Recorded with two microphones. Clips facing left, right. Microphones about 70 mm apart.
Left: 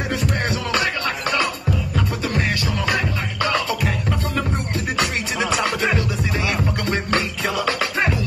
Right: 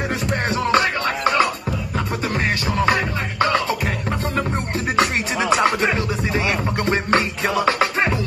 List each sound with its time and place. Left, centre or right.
0.1 s music: right
4.9 s music: right